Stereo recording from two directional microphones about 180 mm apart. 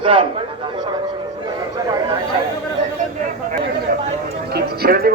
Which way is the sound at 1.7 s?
20° right (ahead or behind).